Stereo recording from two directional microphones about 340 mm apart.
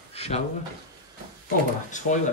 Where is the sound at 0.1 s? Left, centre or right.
Centre.